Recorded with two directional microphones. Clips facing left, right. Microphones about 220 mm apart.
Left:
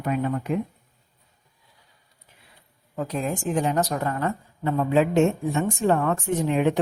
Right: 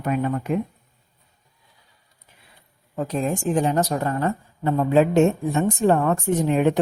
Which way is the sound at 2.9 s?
30° right (ahead or behind).